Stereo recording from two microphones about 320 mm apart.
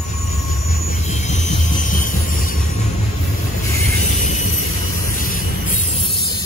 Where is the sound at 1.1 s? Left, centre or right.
Left.